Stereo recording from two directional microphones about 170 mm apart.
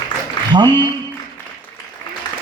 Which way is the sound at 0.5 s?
25° right (ahead or behind).